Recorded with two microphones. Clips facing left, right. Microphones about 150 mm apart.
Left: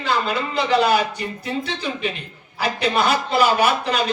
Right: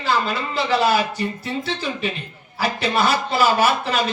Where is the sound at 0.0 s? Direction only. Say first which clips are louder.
Even; 35° right (ahead or behind).